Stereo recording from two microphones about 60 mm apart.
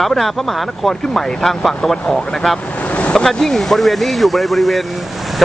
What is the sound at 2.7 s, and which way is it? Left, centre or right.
Vehicle, left.